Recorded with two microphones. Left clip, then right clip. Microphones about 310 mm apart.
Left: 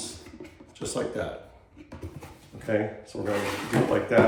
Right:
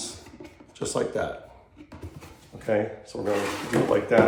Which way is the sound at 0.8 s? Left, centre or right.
Centre.